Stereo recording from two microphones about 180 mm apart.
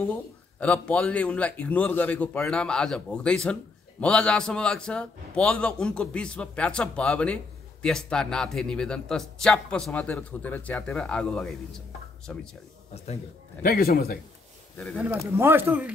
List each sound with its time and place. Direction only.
0.0 s a man's voice: 10° left (ahead or behind)
12.9 s a man's voice: 35° left (ahead or behind)
13.6 s a man's voice: 55° left (ahead or behind)
15.3 s speech: 10° right (ahead or behind)